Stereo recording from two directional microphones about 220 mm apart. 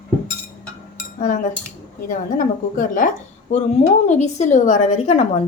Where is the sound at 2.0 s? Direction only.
35° left (ahead or behind).